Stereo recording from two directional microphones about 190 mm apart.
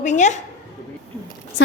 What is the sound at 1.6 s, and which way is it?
Speech, 70° left (ahead or behind).